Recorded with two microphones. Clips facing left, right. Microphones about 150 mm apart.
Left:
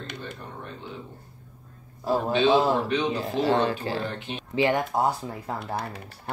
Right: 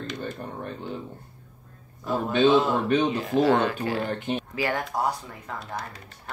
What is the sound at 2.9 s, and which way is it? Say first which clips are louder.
Speech: right 3 dB; 50° right (ahead or behind).